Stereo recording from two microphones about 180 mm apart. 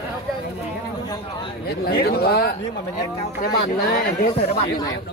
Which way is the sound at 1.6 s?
60° left (ahead or behind).